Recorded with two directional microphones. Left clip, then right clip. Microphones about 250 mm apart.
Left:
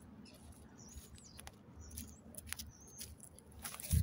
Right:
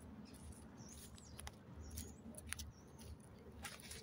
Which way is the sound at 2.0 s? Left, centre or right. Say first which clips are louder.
Even; left.